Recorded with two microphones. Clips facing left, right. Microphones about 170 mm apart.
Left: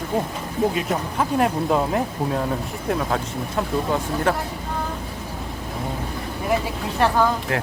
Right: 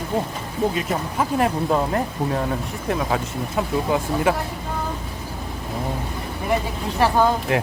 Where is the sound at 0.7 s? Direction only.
Centre (ahead or behind).